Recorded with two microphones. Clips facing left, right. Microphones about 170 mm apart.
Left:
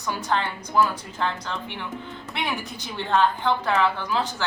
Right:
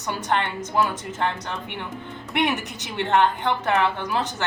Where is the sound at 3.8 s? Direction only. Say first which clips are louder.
Even; 60° right (ahead or behind).